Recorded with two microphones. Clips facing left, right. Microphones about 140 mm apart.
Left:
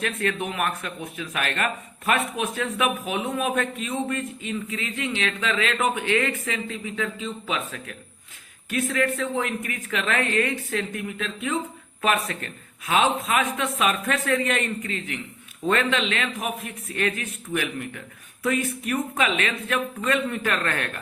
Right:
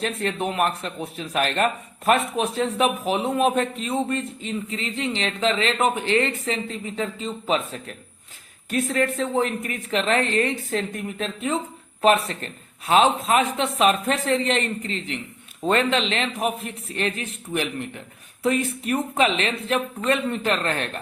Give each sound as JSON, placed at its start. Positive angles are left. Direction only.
{"t": 0.0, "sound": "a man's voice", "side_deg": -30}